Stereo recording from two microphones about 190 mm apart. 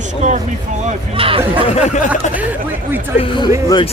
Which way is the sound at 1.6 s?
35° left (ahead or behind).